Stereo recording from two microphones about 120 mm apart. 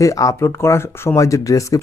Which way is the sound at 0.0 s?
25° left (ahead or behind).